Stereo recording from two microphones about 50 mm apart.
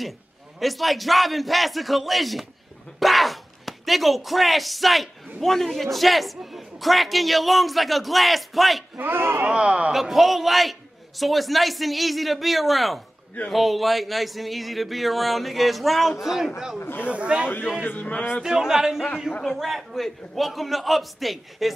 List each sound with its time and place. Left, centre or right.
0.6 s a man's voice: centre
3.0 s a sound: centre
5.4 s a man's voice: centre
8.9 s speech: right
9.5 s speech: right
9.9 s a man's voice: centre
16.8 s speech: left
17.1 s speech: right
17.8 s speech: left
18.4 s a man's voice: centre